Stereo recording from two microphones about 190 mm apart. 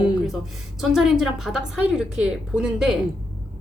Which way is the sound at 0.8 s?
Centre (ahead or behind).